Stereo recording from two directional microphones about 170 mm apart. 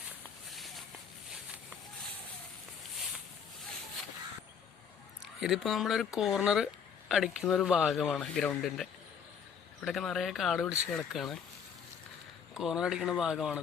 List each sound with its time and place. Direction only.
0.5 s a sound: centre (ahead or behind)
5.4 s speech: centre (ahead or behind)
12.5 s speech: 5° right (ahead or behind)